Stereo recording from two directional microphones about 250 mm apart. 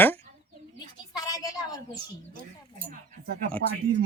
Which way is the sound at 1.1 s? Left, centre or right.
Centre.